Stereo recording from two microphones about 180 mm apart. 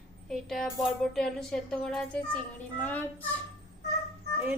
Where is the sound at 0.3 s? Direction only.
Centre (ahead or behind).